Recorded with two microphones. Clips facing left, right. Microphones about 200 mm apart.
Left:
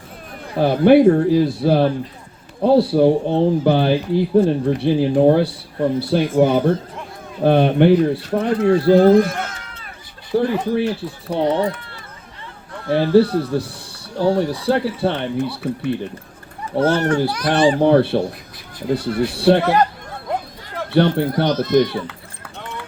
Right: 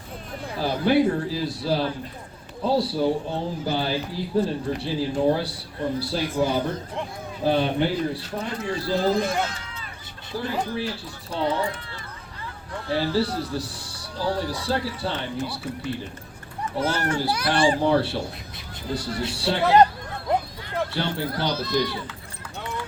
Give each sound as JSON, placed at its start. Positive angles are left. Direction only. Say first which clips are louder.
{"t": 0.5, "sound": "speech", "louder": "left 9 dB", "side_deg": 55}
{"t": 12.9, "sound": "speech", "louder": "left 10 dB", "side_deg": 55}
{"t": 17.2, "sound": "speech", "louder": "left 5 dB", "side_deg": -10}
{"t": 17.7, "sound": "speech", "louder": "left 8 dB", "side_deg": 55}
{"t": 20.9, "sound": "speech", "louder": "left 11 dB", "side_deg": 55}
{"t": 22.0, "sound": "run", "louder": "left 4 dB", "side_deg": 60}